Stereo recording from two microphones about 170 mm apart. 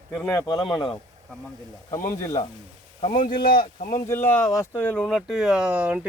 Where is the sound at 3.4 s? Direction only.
30° left (ahead or behind).